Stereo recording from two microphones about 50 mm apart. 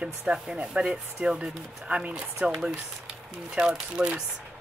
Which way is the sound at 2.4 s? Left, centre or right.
Centre.